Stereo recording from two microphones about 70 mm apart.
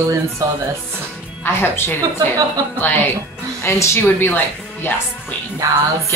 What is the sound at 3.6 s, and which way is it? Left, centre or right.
Speech, left.